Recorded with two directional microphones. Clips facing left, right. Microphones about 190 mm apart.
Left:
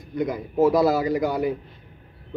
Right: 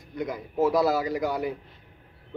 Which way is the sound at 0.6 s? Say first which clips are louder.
Left 4 dB; 20° left (ahead or behind).